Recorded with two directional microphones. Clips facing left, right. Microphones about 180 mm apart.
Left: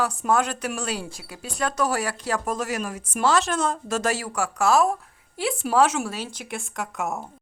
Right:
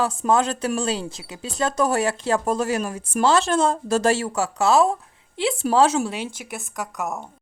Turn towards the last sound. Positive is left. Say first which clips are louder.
# even
turn(degrees=0)  # may be behind; listen again after turning